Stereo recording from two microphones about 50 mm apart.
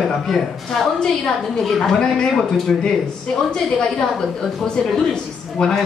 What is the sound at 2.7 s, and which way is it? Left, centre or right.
Speech, centre.